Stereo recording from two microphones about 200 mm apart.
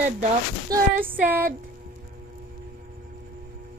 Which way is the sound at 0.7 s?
10° right (ahead or behind).